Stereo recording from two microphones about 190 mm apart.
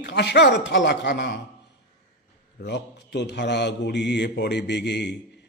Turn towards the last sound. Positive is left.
turn(degrees=65)  # may be behind; listen again after turning